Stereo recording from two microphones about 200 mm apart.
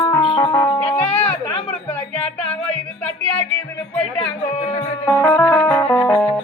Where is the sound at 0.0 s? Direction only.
20° left (ahead or behind).